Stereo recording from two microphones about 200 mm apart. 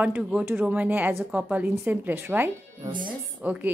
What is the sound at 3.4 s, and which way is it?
Speech, 10° right (ahead or behind).